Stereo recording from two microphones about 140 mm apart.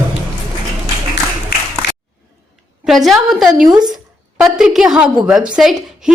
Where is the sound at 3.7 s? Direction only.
30° right (ahead or behind).